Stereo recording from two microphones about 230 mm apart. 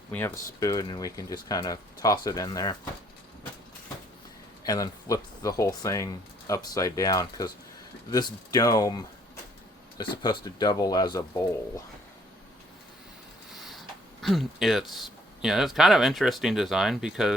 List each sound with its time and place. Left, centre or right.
0.1 s speech: centre
4.6 s speech: centre
13.5 s speech: centre